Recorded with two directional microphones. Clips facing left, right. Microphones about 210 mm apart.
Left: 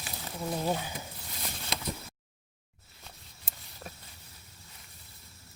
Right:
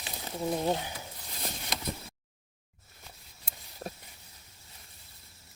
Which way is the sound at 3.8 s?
40° right (ahead or behind).